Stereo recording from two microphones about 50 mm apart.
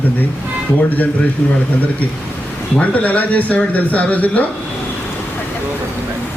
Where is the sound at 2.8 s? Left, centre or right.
Left.